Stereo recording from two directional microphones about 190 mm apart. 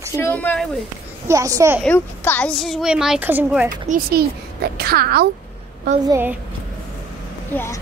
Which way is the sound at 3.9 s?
50° right (ahead or behind).